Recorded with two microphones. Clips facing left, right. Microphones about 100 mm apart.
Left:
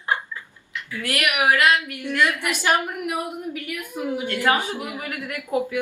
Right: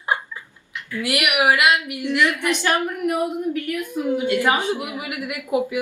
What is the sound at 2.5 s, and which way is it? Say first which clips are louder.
Speech: right 1 dB; 15° left (ahead or behind).